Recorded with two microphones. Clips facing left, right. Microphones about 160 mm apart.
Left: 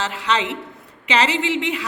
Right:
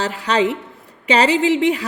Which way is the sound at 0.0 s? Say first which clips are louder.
Right 4 dB; 40° right (ahead or behind).